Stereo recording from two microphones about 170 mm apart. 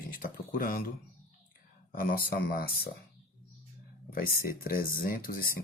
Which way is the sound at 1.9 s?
60° left (ahead or behind).